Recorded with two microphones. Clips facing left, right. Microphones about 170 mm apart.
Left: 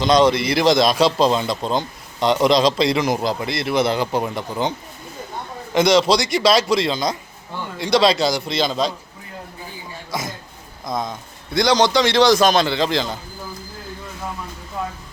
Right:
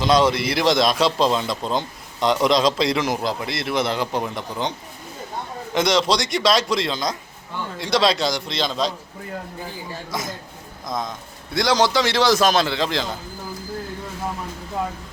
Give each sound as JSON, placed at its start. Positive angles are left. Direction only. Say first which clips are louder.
{"t": 0.0, "sound": "a man's voice", "louder": "left 2 dB", "side_deg": -5}
{"t": 5.7, "sound": "a man's voice", "louder": "left 4 dB", "side_deg": 0}
{"t": 10.1, "sound": "a man's voice", "louder": "left 4 dB", "side_deg": 0}